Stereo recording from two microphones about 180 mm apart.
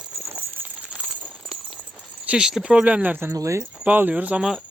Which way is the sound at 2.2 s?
5° right (ahead or behind).